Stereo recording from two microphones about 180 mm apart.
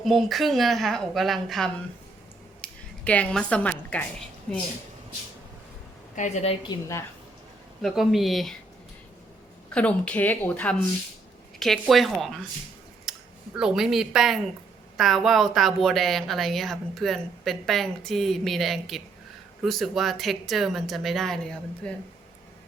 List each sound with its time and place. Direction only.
0.0 s speech: centre (ahead or behind)
6.1 s a woman's voice: 40° left (ahead or behind); by 7.0 s 20° left (ahead or behind)
7.8 s speech: centre (ahead or behind)
9.7 s speech: 5° left (ahead or behind)